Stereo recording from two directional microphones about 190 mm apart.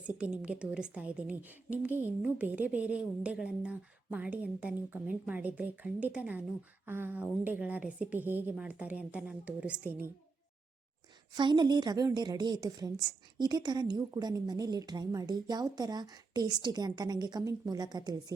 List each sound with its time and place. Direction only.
0.2 s a woman's voice: 5° right (ahead or behind)
11.3 s a woman's voice: 25° right (ahead or behind)